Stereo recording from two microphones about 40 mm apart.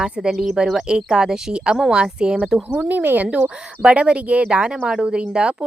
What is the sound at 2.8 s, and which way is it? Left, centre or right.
Speech, right.